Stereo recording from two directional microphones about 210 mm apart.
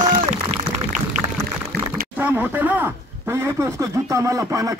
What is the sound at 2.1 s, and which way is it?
Speech, 5° right (ahead or behind).